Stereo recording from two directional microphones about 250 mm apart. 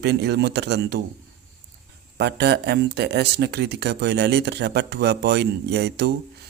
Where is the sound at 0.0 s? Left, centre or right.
Right.